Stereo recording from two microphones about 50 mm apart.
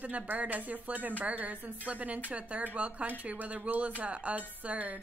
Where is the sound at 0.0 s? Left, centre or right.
Right.